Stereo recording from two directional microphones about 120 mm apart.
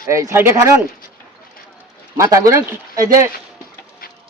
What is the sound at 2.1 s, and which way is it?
Speech, 25° right (ahead or behind).